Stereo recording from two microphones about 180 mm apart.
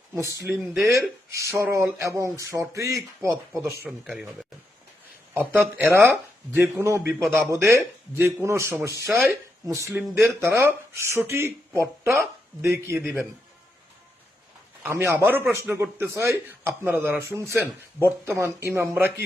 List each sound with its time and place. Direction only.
0.1 s speech: 15° right (ahead or behind)
3.8 s speech: 5° right (ahead or behind)
14.8 s speech: 10° right (ahead or behind)